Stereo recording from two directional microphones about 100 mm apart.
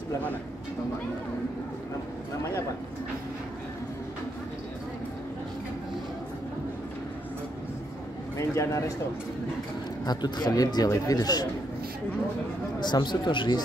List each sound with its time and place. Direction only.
8.4 s a man's voice: 30° left (ahead or behind)
10.0 s a man's voice: 45° left (ahead or behind)
12.8 s speech: 50° left (ahead or behind)